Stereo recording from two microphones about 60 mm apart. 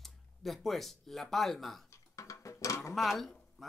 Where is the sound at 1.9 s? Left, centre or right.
Left.